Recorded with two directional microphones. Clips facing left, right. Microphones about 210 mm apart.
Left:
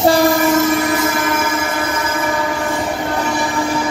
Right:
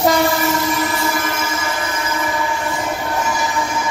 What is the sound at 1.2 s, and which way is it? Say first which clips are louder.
Train: left 5 dB; 55° left (ahead or behind).